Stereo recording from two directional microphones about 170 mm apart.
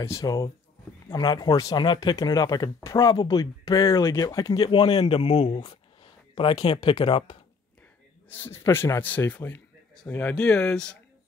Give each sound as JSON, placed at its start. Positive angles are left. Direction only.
{"t": 0.0, "sound": "a man's voice", "side_deg": 20}
{"t": 8.3, "sound": "a man's voice", "side_deg": 15}